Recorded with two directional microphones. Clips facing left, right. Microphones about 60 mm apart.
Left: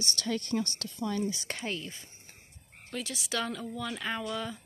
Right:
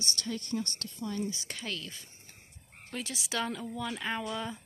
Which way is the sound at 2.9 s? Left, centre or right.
Right.